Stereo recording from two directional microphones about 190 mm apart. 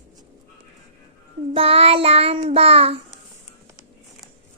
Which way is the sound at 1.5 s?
30° right (ahead or behind).